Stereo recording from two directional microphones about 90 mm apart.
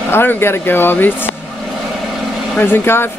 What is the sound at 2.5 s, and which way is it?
Speech, 25° left (ahead or behind).